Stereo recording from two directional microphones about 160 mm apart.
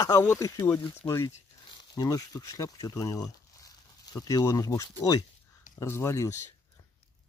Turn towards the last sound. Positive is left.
turn(degrees=20)  # may be behind; listen again after turning